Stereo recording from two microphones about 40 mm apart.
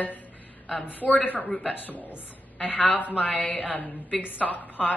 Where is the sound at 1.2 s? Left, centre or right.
Left.